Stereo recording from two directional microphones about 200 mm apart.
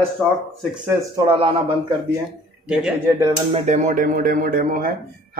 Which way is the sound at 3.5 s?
35° right (ahead or behind).